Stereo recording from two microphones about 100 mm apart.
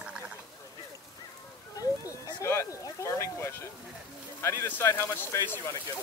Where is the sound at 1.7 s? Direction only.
35° left (ahead or behind).